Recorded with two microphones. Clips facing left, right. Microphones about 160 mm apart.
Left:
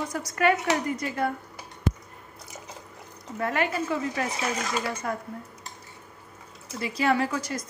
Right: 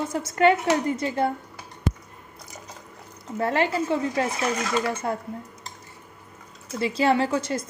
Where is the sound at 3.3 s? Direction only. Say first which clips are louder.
Right 4 dB; 30° right (ahead or behind).